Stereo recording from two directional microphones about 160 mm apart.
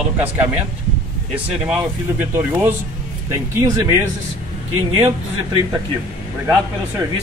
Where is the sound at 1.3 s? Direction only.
10° right (ahead or behind).